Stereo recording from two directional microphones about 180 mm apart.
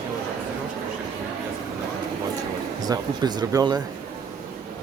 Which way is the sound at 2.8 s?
20° right (ahead or behind).